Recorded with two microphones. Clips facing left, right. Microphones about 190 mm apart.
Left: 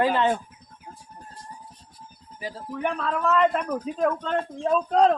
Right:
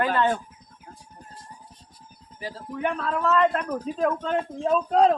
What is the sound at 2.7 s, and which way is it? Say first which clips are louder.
Speech: even; 5° right (ahead or behind).